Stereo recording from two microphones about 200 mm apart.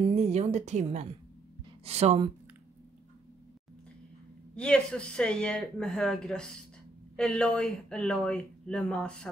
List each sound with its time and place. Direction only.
0.1 s a woman's voice: 35° right (ahead or behind)
4.6 s speech: 5° left (ahead or behind)